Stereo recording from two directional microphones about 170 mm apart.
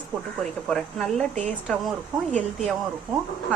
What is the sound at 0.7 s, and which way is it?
Speech, centre (ahead or behind).